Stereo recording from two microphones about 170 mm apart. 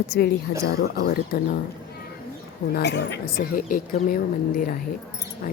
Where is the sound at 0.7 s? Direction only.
65° left (ahead or behind).